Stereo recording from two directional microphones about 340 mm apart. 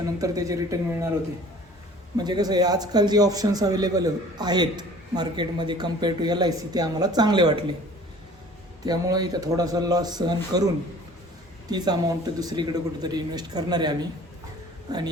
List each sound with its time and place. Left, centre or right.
0.0 s a man's voice: centre
2.1 s a man's voice: centre
8.8 s a man's voice: centre
11.7 s a man's voice: centre